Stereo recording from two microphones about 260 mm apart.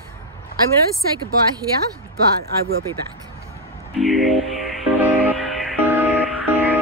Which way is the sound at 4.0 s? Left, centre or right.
Centre.